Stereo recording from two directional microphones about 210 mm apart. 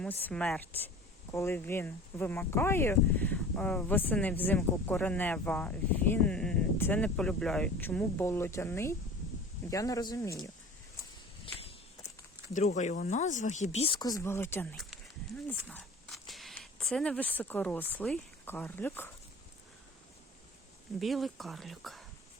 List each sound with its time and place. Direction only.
0.0 s speech: 10° left (ahead or behind)
12.5 s speech: 35° left (ahead or behind); by 19.1 s 10° left (ahead or behind)
21.0 s speech: centre (ahead or behind)